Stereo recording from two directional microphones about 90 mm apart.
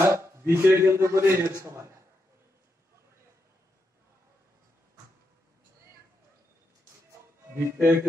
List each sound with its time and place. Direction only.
0.0 s a man's voice: 30° right (ahead or behind)
7.5 s speech: 30° right (ahead or behind)